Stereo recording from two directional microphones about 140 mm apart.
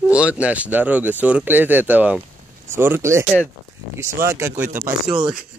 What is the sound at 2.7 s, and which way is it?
Speech, 15° right (ahead or behind).